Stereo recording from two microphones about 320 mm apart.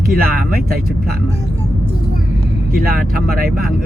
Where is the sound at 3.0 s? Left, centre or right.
Right.